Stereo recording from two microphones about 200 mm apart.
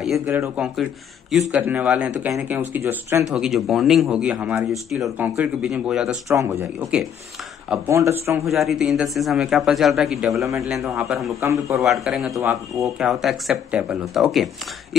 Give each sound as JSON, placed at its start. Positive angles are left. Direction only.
{"t": 0.3, "sound": "speech", "side_deg": -10}
{"t": 3.3, "sound": "speech", "side_deg": 0}
{"t": 6.2, "sound": "speech", "side_deg": -15}
{"t": 8.5, "sound": "speech", "side_deg": 0}
{"t": 11.4, "sound": "speech", "side_deg": -15}
{"t": 11.8, "sound": "speech", "side_deg": 0}
{"t": 12.4, "sound": "speech", "side_deg": -15}
{"t": 12.8, "sound": "speech", "side_deg": 0}